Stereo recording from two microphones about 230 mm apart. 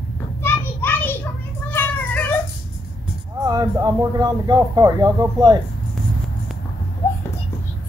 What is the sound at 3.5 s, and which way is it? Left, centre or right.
Speech, centre.